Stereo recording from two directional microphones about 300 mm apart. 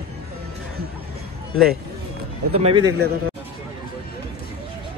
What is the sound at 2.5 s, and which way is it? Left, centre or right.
Speech, centre.